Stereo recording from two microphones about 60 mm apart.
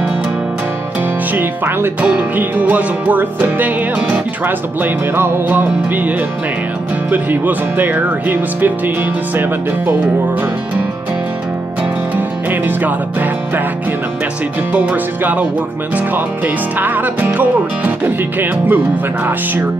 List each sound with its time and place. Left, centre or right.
1.3 s music: right
12.2 s music: right
14.7 s music: right
16.4 s music: right